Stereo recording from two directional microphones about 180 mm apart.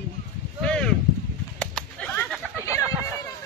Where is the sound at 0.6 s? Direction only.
5° left (ahead or behind).